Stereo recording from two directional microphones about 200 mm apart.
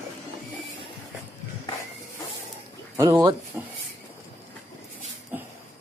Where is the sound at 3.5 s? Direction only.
10° right (ahead or behind).